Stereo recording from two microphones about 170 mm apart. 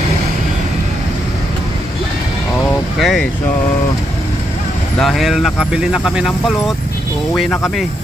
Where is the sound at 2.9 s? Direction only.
Centre (ahead or behind).